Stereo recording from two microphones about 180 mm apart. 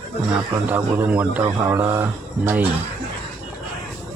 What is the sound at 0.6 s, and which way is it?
Speech, 10° right (ahead or behind).